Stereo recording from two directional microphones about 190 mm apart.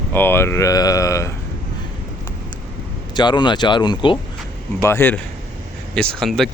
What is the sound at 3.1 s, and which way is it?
Speech, 25° left (ahead or behind).